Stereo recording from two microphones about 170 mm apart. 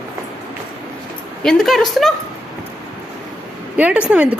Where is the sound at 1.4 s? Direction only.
Centre (ahead or behind).